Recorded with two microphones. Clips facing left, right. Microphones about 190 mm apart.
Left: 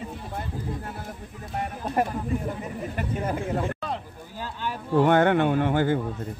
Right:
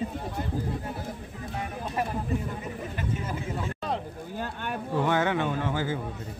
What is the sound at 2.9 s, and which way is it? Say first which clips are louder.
Speech: left 6 dB; 55° left (ahead or behind).